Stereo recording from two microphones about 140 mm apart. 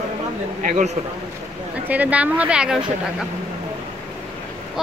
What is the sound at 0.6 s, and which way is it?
Speech, 60° right (ahead or behind).